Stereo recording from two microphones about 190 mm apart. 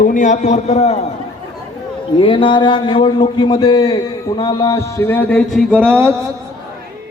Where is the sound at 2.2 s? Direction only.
25° left (ahead or behind); by 5.8 s centre (ahead or behind).